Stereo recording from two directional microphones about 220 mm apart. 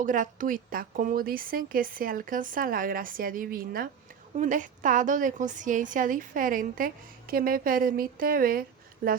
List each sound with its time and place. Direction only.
0.0 s a woman's voice: 35° right (ahead or behind)